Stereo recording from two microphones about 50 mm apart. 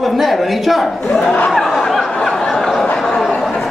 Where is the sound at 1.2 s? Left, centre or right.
Left.